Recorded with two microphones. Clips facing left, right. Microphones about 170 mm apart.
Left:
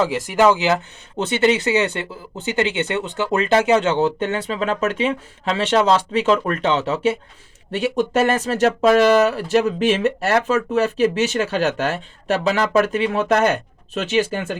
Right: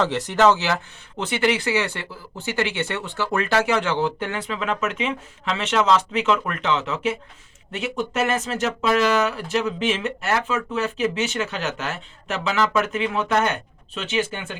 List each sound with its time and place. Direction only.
0.0 s speech: 10° left (ahead or behind); by 14.6 s 40° left (ahead or behind)